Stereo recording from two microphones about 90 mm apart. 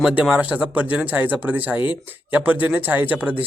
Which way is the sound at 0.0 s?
15° right (ahead or behind).